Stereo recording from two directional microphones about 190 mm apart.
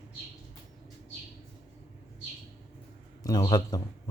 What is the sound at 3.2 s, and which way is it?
Speech, 20° left (ahead or behind).